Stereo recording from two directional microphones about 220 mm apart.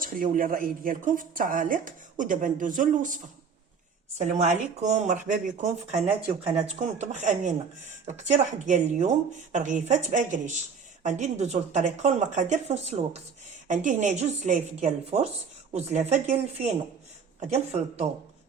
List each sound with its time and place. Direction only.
0.0 s speech: 40° right (ahead or behind)
4.2 s speech: 35° right (ahead or behind)